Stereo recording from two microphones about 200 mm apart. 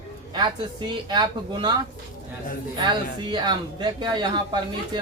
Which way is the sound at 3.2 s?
25° right (ahead or behind).